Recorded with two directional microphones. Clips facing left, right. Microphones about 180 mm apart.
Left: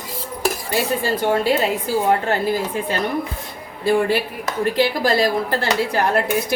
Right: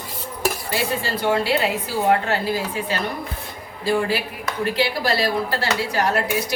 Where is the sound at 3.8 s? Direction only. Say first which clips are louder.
Left 4 dB; 50° left (ahead or behind).